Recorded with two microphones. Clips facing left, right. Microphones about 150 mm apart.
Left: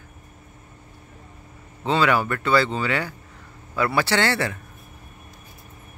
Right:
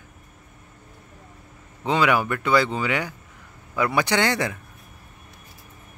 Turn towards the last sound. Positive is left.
turn(degrees=-15)  # may be behind; listen again after turning